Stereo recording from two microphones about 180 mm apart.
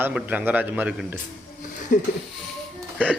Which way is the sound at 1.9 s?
50° left (ahead or behind).